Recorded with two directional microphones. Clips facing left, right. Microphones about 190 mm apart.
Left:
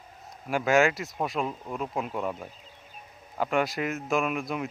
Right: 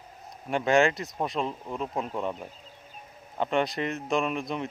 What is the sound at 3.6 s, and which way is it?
Speech, centre (ahead or behind).